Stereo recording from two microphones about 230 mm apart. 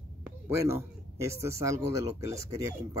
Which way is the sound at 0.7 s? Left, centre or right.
Centre.